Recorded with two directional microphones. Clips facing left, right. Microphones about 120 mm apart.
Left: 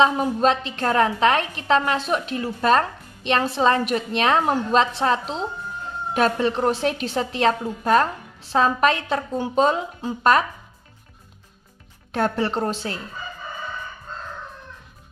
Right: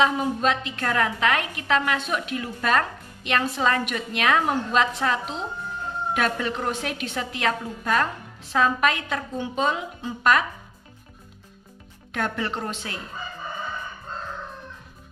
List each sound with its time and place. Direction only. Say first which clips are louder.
0.0 s a woman's voice: left 4 dB; 35° left (ahead or behind)
12.1 s a woman's voice: left 5 dB; 35° left (ahead or behind)